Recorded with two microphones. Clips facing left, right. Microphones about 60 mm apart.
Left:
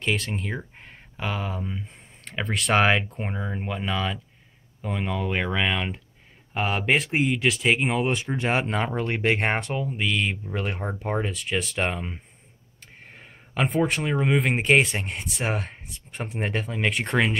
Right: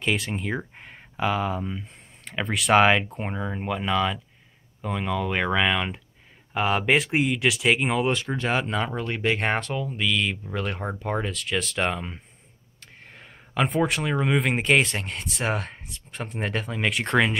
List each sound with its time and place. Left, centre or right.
0.0 s speech: centre
8.4 s speech: left; by 12.2 s centre
13.0 s a sound: centre
13.7 s speech: centre
15.0 s speech: centre
15.3 s speech: centre